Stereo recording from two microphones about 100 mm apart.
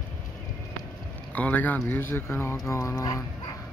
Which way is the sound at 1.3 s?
15° left (ahead or behind).